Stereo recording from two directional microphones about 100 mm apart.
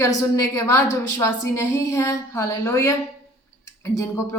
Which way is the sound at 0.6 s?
25° left (ahead or behind).